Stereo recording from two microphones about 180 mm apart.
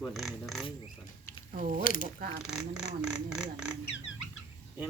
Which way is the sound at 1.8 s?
50° left (ahead or behind).